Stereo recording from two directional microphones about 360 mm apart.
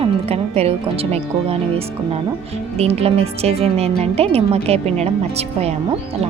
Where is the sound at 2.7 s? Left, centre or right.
Centre.